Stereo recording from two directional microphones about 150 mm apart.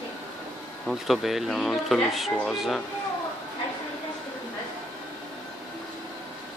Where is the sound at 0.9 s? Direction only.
Centre (ahead or behind).